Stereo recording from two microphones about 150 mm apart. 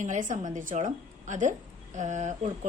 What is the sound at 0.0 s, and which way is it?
A woman's voice, 55° right (ahead or behind).